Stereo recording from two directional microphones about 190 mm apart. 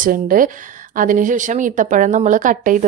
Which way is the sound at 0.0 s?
45° right (ahead or behind).